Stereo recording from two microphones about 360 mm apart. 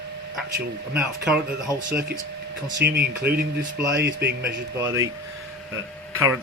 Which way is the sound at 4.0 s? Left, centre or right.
Right.